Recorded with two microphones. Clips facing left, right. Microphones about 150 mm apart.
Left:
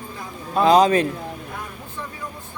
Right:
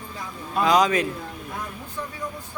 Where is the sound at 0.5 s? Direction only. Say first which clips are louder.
Left 5 dB; 30° left (ahead or behind).